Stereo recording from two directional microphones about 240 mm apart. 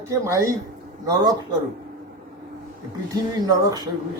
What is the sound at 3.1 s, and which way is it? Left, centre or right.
Speech, centre.